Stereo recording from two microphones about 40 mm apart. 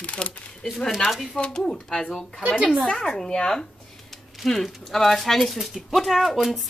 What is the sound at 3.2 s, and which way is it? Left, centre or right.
A woman's voice, centre.